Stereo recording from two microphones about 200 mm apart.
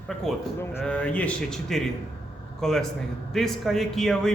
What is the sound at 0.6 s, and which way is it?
A man's voice, 10° left (ahead or behind).